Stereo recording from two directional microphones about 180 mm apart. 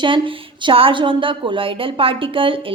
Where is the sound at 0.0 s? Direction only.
25° right (ahead or behind).